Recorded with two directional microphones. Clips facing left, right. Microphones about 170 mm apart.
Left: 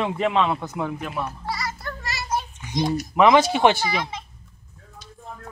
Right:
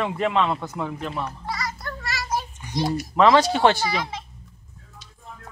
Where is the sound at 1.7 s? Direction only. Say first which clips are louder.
Even; centre (ahead or behind).